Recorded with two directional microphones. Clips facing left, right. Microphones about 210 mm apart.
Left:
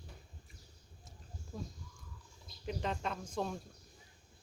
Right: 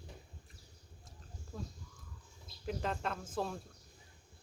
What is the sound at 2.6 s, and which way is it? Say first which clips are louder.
Speech: even; centre (ahead or behind).